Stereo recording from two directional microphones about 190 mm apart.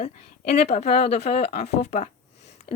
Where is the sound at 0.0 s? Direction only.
35° left (ahead or behind).